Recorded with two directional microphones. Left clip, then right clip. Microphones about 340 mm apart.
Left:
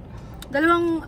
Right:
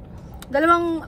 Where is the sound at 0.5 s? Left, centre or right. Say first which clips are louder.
Right 2 dB; centre.